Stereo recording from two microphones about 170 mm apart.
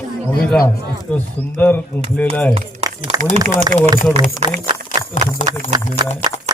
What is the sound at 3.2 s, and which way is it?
Speech, 50° right (ahead or behind).